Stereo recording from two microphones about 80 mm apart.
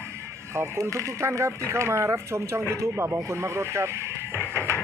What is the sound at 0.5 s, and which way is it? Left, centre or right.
Speech, right.